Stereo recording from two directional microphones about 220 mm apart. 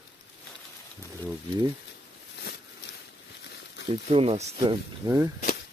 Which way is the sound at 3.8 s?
25° right (ahead or behind).